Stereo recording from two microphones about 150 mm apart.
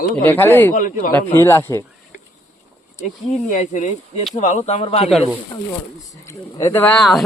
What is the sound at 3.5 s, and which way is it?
Speech, 55° left (ahead or behind).